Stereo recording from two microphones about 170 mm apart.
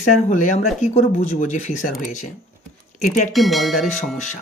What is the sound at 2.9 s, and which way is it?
Speech, 45° left (ahead or behind).